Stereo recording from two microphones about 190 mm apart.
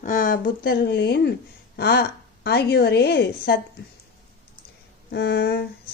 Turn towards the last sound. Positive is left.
turn(degrees=55)  # may be behind; listen again after turning